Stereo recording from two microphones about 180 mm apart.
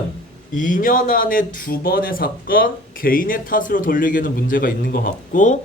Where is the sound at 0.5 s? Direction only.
45° left (ahead or behind).